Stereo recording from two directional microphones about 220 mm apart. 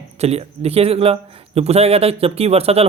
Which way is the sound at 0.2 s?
30° right (ahead or behind).